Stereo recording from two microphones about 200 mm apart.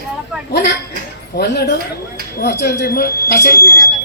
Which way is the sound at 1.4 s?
55° left (ahead or behind).